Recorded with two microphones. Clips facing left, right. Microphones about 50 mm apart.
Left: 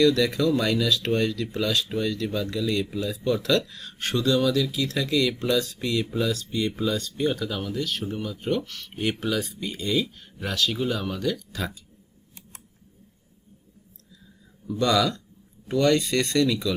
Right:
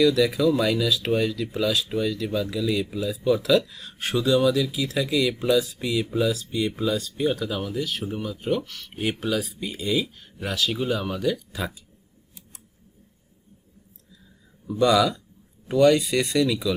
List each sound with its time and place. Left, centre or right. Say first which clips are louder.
0.0 s speech: right 1 dB; centre
14.7 s speech: right 3 dB; centre